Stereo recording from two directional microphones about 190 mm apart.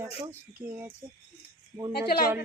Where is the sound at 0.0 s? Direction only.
15° right (ahead or behind).